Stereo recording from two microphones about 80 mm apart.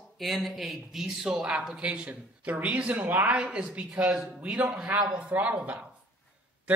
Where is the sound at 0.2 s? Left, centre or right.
Centre.